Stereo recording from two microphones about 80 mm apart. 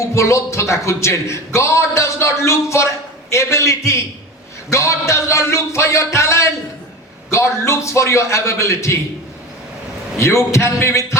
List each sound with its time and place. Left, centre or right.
0.1 s a man's voice: left
10.2 s a man's voice: left